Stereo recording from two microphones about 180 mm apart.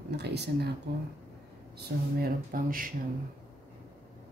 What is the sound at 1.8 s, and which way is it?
Speech, 55° right (ahead or behind).